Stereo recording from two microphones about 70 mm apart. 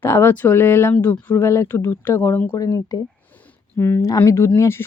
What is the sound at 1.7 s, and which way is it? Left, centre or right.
Speech, left.